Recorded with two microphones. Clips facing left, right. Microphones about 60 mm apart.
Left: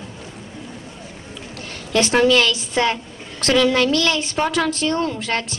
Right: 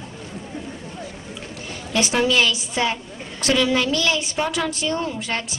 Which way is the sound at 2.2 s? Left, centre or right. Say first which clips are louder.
Left 3 dB; centre.